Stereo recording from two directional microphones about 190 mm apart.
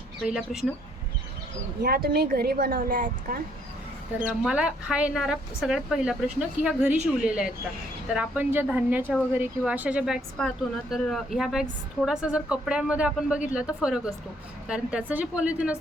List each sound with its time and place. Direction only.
0.2 s speech: centre (ahead or behind)
1.8 s a woman's voice: 55° right (ahead or behind)
4.4 s speech: 5° right (ahead or behind)